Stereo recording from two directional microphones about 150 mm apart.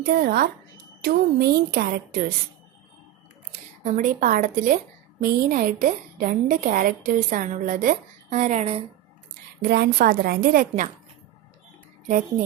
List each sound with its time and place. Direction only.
0.0 s a woman's voice: 90° right
3.5 s speech: 55° right (ahead or behind)
5.2 s a woman's voice: 70° right (ahead or behind); by 8.8 s 45° right (ahead or behind)
9.6 s a woman's voice: 90° right; by 10.8 s 70° right (ahead or behind)